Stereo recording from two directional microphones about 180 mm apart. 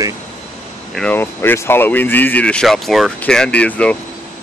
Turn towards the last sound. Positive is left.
turn(degrees=5)  # may be behind; listen again after turning